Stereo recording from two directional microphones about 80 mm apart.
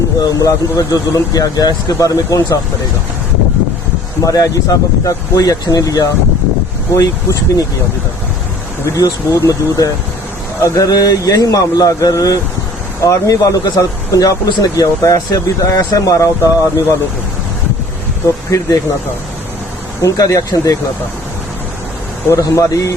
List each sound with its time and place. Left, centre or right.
0.2 s speech: left
4.2 s speech: left
9.0 s speech: left
20.0 s speech: left
22.3 s speech: left